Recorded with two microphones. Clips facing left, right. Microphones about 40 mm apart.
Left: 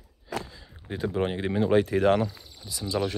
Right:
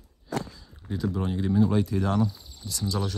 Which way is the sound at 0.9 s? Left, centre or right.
Left.